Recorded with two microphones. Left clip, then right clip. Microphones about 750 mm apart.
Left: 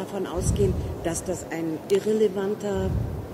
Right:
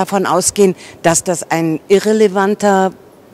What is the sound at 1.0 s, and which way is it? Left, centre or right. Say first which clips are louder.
A woman's voice: right 16 dB; right.